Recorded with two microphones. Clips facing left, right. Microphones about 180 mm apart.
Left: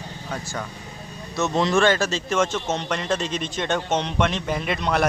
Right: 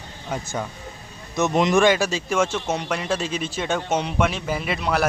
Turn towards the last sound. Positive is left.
turn(degrees=-5)  # may be behind; listen again after turning